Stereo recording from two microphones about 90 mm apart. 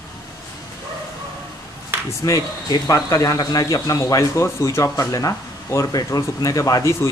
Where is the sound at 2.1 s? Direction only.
40° left (ahead or behind).